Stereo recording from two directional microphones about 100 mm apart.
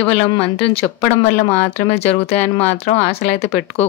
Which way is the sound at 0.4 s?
70° left (ahead or behind).